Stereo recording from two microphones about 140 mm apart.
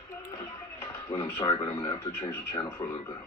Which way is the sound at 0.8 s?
20° left (ahead or behind).